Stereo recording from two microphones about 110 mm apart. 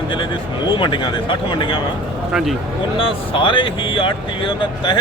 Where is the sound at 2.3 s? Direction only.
5° right (ahead or behind).